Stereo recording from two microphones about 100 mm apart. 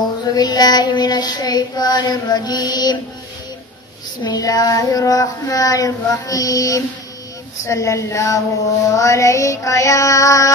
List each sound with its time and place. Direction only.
0.2 s child singing: 40° left (ahead or behind)
4.2 s child singing: 45° left (ahead or behind)